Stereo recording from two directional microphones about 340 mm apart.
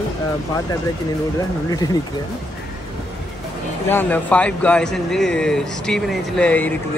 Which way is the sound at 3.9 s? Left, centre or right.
Centre.